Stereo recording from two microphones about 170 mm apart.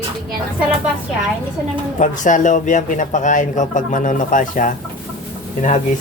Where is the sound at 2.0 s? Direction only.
45° left (ahead or behind).